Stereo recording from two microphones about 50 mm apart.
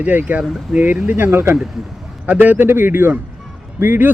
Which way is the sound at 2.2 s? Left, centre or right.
Right.